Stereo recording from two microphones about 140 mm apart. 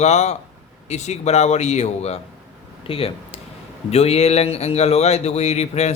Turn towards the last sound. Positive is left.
turn(degrees=50)  # may be behind; listen again after turning